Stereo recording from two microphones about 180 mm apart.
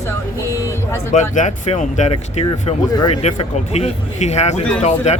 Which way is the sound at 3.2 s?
35° left (ahead or behind).